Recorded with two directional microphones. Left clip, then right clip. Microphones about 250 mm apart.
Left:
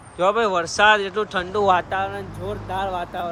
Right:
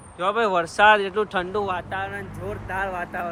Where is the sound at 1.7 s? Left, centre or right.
Left.